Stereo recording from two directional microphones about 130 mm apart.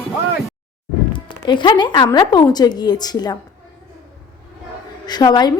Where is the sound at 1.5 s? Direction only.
35° left (ahead or behind).